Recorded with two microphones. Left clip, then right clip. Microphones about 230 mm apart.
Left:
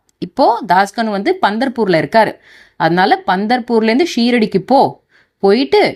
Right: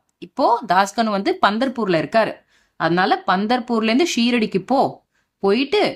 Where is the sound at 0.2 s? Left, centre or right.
Centre.